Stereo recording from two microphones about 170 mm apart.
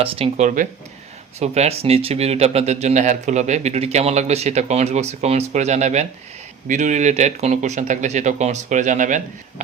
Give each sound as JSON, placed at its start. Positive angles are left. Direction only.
{"t": 0.0, "sound": "speech", "side_deg": -35}
{"t": 0.4, "sound": "speech", "side_deg": -50}
{"t": 1.4, "sound": "speech", "side_deg": -40}